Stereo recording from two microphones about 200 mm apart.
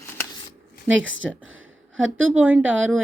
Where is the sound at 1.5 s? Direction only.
75° right (ahead or behind).